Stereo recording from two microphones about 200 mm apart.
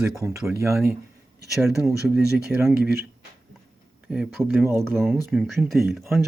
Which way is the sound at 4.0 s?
5° right (ahead or behind).